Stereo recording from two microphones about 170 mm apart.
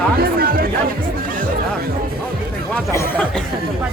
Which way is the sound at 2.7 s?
15° left (ahead or behind).